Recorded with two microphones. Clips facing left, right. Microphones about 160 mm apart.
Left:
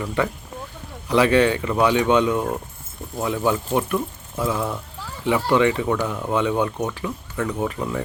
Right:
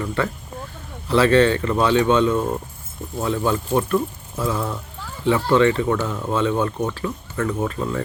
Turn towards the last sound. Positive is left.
turn(degrees=15)  # may be behind; listen again after turning